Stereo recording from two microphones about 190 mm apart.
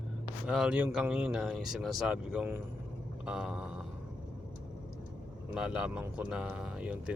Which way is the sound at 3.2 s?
5° right (ahead or behind).